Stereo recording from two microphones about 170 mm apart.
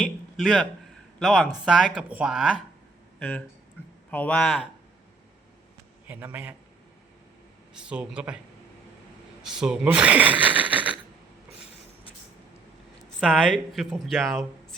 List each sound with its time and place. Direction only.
0.0 s a sound: centre (ahead or behind)
1.2 s speech: centre (ahead or behind)
3.2 s speech: 5° left (ahead or behind)
6.1 s speech: 10° right (ahead or behind)
7.7 s a man's voice: 5° right (ahead or behind)
9.5 s speech: 5° right (ahead or behind)
13.1 s speech: centre (ahead or behind)